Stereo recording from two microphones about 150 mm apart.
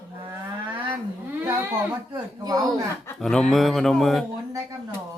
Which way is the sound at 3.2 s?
5° left (ahead or behind).